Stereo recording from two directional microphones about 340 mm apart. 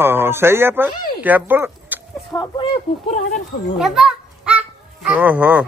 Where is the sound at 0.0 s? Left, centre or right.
Centre.